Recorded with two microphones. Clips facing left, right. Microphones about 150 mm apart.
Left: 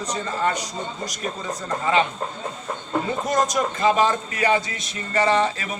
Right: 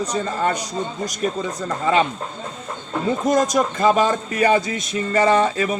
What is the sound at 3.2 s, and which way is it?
Speech, 45° right (ahead or behind).